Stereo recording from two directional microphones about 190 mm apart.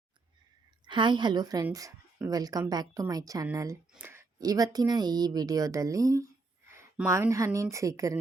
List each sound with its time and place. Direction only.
0.9 s a woman's voice: 25° right (ahead or behind)